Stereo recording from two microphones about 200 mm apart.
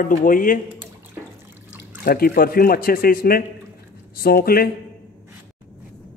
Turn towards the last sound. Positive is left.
turn(degrees=50)  # may be behind; listen again after turning